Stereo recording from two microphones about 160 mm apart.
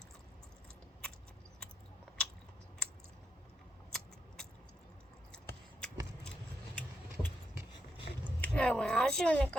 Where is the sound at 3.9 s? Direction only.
5° left (ahead or behind).